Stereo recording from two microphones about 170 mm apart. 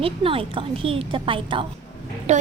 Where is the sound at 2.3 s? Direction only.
40° right (ahead or behind).